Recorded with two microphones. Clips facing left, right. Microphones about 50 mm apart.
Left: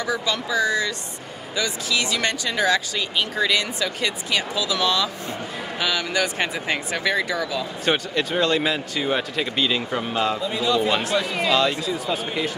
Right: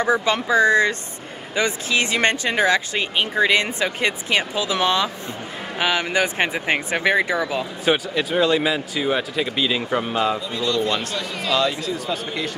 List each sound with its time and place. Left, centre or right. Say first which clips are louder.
0.0 s speech: right 5 dB; right
7.8 s speech: right 2 dB; centre
10.5 s speech: left 1 dB; centre